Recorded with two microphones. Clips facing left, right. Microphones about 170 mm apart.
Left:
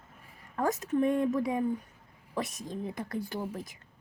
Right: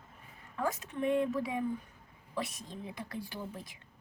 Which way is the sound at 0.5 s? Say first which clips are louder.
Left 7 dB; 40° left (ahead or behind).